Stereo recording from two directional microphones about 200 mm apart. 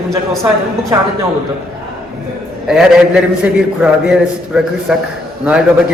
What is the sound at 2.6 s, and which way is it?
A man's voice, 5° right (ahead or behind).